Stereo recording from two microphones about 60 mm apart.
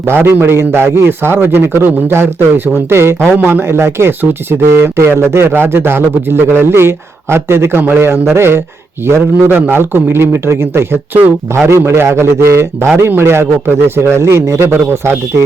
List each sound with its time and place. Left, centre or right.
0.0 s a man's voice: right